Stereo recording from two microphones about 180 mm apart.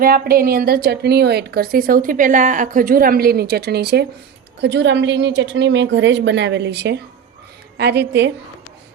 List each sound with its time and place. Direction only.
0.0 s a woman's voice: 55° right (ahead or behind)
4.6 s a woman's voice: 80° right